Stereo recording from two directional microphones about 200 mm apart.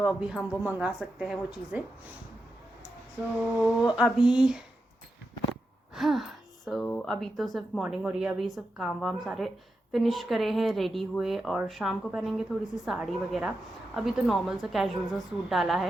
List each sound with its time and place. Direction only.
0.0 s speech: 5° right (ahead or behind)
3.9 s speech: centre (ahead or behind)
5.9 s speech: centre (ahead or behind)